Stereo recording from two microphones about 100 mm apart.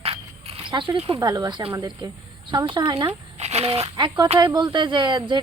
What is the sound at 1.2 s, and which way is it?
A woman's voice, 40° right (ahead or behind).